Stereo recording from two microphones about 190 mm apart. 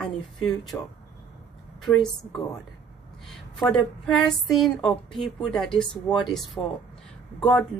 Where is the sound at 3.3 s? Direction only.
Centre (ahead or behind).